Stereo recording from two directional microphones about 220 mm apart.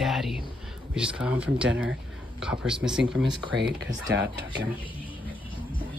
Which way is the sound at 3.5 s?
55° right (ahead or behind).